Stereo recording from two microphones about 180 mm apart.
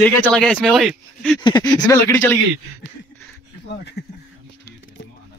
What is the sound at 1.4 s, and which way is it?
Speech, 20° left (ahead or behind).